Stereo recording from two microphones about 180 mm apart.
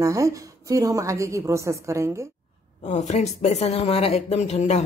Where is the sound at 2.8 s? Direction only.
40° left (ahead or behind).